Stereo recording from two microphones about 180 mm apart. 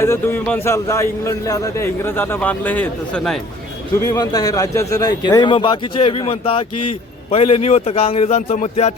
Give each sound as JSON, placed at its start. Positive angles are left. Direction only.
{"t": 0.0, "sound": "a man's voice", "side_deg": 15}
{"t": 4.1, "sound": "a man's voice", "side_deg": 20}